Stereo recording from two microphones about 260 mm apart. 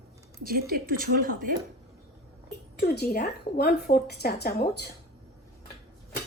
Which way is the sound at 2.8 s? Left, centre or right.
Left.